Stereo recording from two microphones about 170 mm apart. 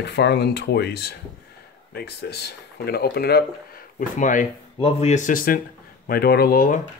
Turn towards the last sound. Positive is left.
turn(degrees=55)  # may be behind; listen again after turning